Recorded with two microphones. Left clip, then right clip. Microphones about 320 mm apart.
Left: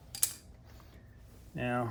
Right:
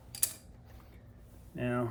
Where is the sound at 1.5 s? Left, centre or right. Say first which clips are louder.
Even; left.